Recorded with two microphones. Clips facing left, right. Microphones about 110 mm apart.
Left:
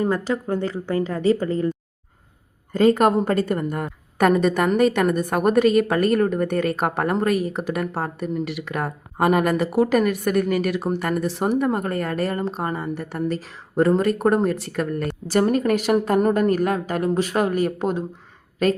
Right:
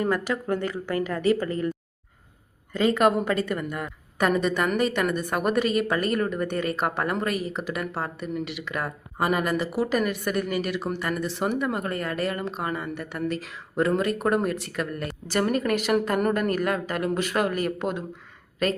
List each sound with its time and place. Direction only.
0.0 s speech: 25° left (ahead or behind)
2.7 s a woman's voice: 40° left (ahead or behind)